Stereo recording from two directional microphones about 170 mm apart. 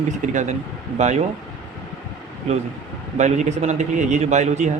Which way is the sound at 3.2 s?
45° right (ahead or behind).